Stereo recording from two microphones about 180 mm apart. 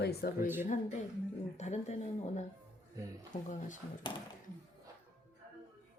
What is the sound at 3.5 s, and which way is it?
Speech, 45° left (ahead or behind).